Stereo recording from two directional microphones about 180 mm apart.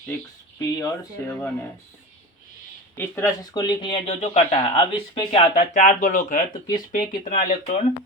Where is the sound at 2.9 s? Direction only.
15° left (ahead or behind).